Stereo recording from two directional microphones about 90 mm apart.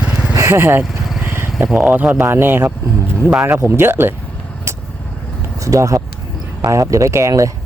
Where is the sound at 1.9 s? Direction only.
20° right (ahead or behind).